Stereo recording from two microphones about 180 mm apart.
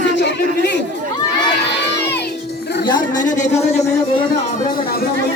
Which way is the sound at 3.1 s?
45° left (ahead or behind).